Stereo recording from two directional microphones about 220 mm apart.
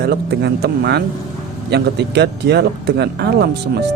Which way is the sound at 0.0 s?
45° right (ahead or behind).